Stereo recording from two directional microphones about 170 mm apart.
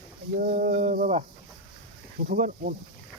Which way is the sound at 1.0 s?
40° right (ahead or behind).